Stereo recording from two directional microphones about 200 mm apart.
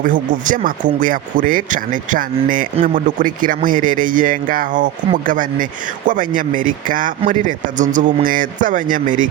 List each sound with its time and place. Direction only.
0.0 s speech: 40° right (ahead or behind)